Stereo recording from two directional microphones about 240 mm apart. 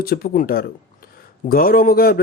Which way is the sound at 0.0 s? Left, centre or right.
Left.